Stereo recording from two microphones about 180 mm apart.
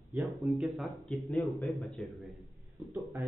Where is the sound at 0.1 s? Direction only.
Centre (ahead or behind).